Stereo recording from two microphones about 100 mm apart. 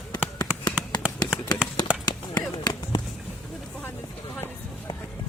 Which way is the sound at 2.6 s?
45° left (ahead or behind).